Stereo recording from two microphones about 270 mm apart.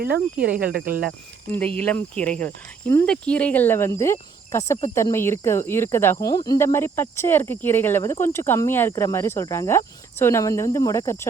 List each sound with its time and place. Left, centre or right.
0.0 s speech: right
1.5 s cricket: centre